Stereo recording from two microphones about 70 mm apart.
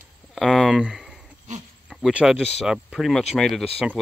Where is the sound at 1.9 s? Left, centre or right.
Centre.